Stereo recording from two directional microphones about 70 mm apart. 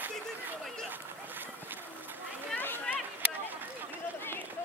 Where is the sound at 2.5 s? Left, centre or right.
Left.